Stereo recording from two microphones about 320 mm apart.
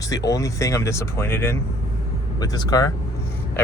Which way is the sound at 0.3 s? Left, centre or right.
Centre.